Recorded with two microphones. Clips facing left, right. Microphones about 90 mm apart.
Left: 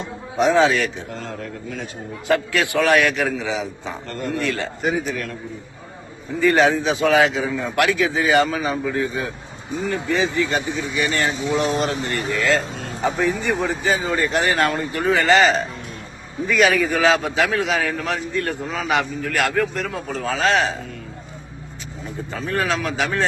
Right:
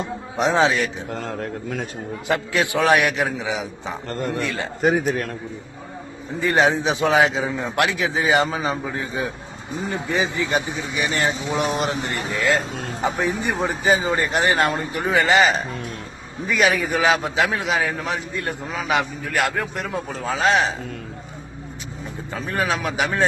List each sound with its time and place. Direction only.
0.3 s a man's voice: 20° right (ahead or behind)
1.1 s speech: 45° right (ahead or behind)
2.2 s a man's voice: 20° right (ahead or behind)
4.8 s speech: 50° right (ahead or behind)
6.4 s a man's voice: 20° right (ahead or behind)
17.7 s a man's voice: 5° right (ahead or behind)
22.3 s a man's voice: 10° right (ahead or behind)